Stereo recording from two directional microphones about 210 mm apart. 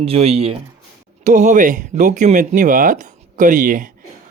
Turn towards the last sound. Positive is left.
turn(degrees=-40)  # may be behind; listen again after turning